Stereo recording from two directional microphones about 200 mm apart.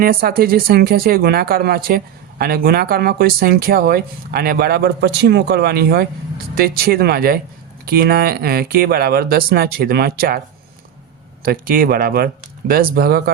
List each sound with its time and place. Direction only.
0.0 s speech: 45° right (ahead or behind)
11.4 s speech: 45° right (ahead or behind)